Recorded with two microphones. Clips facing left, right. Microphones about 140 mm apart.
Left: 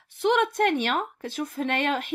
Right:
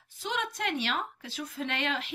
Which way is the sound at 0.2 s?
55° left (ahead or behind).